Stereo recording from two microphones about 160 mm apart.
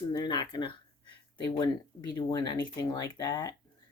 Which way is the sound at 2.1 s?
25° left (ahead or behind).